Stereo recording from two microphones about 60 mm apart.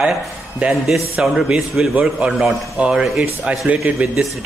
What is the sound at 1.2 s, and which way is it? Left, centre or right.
A man's voice, centre.